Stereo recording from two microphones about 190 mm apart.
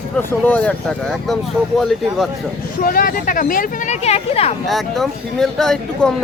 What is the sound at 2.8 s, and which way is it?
A woman's voice, 50° left (ahead or behind).